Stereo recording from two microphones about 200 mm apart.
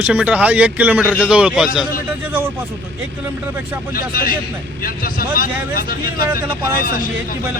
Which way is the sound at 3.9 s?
45° left (ahead or behind).